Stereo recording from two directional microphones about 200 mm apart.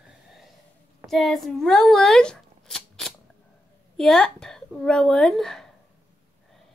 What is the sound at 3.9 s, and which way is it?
Speech, centre (ahead or behind).